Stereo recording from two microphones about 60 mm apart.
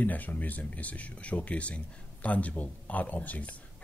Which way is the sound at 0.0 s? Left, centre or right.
Left.